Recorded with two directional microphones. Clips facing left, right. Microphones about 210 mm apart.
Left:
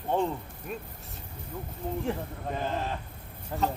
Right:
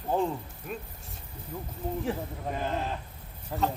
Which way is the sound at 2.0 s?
Centre (ahead or behind).